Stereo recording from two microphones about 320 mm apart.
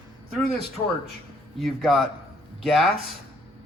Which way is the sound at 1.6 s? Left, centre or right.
Centre.